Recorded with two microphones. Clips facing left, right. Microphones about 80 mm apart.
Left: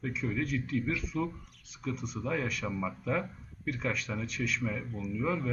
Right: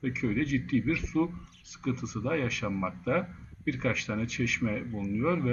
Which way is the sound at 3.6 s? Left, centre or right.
Right.